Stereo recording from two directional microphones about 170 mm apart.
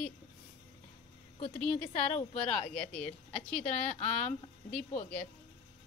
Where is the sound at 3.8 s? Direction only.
40° left (ahead or behind).